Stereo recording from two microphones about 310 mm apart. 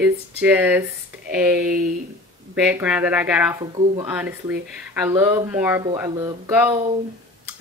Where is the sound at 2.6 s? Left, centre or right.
Centre.